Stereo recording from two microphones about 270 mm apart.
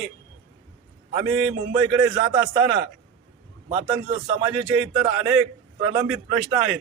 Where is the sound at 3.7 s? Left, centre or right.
Centre.